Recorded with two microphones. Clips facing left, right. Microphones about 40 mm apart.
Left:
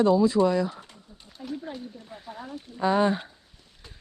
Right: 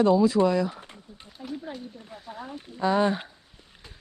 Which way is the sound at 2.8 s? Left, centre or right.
Centre.